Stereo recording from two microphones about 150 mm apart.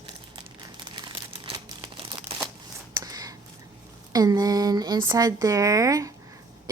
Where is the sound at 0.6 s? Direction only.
30° right (ahead or behind).